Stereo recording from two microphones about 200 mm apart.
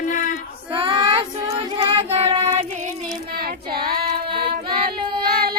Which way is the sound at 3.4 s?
50° right (ahead or behind).